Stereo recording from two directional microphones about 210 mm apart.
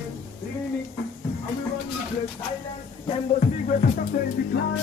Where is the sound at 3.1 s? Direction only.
30° left (ahead or behind).